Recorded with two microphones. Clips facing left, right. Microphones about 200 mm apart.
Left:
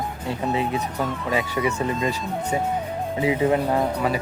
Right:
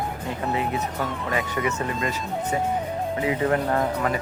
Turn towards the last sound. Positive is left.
turn(degrees=10)  # may be behind; listen again after turning